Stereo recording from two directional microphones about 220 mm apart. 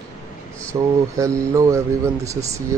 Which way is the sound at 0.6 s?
15° right (ahead or behind).